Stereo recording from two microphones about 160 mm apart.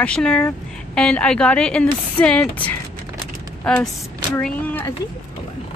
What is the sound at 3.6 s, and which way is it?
Speech, 5° left (ahead or behind).